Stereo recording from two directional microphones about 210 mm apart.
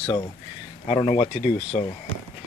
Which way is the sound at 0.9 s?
25° left (ahead or behind).